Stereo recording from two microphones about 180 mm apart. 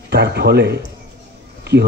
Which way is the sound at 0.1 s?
65° right (ahead or behind).